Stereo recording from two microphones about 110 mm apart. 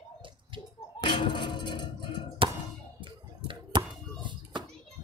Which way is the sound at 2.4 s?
50° right (ahead or behind).